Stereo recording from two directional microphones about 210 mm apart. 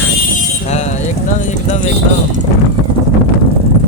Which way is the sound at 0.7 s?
35° left (ahead or behind).